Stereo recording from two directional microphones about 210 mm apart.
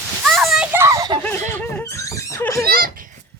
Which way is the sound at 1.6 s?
10° left (ahead or behind).